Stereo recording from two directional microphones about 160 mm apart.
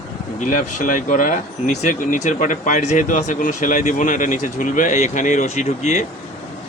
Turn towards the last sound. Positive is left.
turn(degrees=45)  # may be behind; listen again after turning